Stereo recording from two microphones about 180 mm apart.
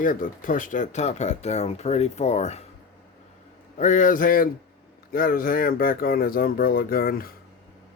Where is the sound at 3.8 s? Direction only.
45° left (ahead or behind).